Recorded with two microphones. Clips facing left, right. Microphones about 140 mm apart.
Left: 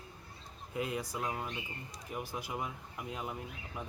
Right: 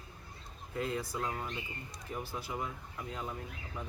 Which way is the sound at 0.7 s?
15° left (ahead or behind).